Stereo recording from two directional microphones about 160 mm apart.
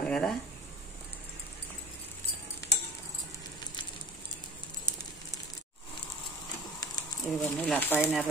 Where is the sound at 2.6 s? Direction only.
15° left (ahead or behind).